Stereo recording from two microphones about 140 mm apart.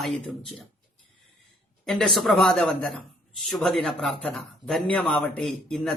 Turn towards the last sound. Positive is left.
turn(degrees=5)  # may be behind; listen again after turning